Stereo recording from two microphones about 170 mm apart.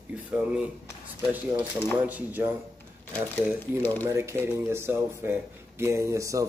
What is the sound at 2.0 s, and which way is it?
Speech, 10° right (ahead or behind).